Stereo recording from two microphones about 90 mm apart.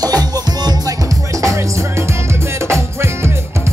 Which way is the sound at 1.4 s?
35° right (ahead or behind).